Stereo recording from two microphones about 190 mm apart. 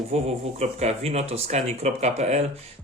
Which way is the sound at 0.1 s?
35° right (ahead or behind).